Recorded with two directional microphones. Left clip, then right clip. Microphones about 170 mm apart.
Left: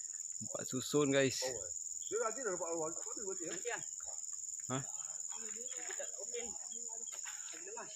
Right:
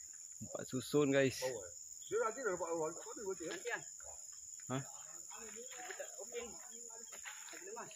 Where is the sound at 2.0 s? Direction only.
45° right (ahead or behind).